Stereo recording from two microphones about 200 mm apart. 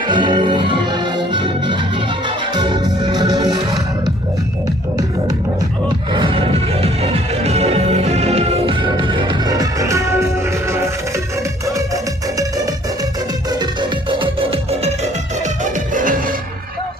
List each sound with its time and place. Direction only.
0.1 s music: 25° right (ahead or behind)
6.1 s music: 25° right (ahead or behind)
14.2 s music: 25° right (ahead or behind)
16.0 s music: 40° right (ahead or behind)